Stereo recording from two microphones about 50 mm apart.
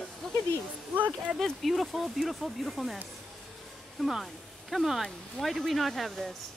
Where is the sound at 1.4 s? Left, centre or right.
Centre.